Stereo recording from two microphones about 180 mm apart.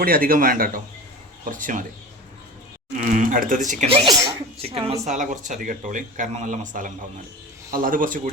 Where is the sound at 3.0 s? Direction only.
50° right (ahead or behind).